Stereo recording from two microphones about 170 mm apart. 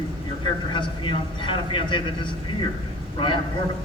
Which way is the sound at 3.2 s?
30° left (ahead or behind).